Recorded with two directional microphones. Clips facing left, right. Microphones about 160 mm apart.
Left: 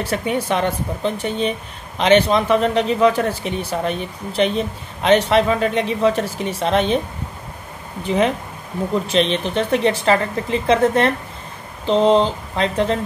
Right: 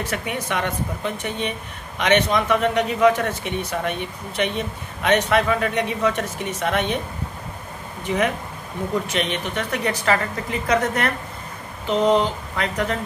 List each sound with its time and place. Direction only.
0.0 s speech: 30° left (ahead or behind)
8.0 s speech: 30° left (ahead or behind)